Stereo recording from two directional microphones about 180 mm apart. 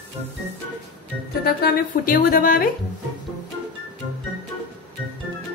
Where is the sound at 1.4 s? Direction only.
55° left (ahead or behind).